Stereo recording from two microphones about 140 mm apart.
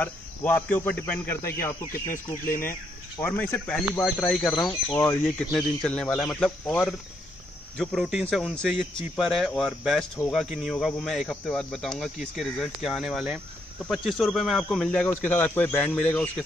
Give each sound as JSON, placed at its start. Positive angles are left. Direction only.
{"t": 0.0, "sound": "speech", "side_deg": 10}
{"t": 3.2, "sound": "speech", "side_deg": 10}
{"t": 4.6, "sound": "speech", "side_deg": 25}
{"t": 5.2, "sound": "speech", "side_deg": 0}
{"t": 7.7, "sound": "speech", "side_deg": 0}